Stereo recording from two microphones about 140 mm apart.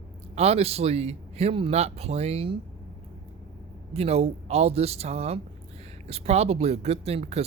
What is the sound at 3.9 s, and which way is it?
Speech, 45° right (ahead or behind).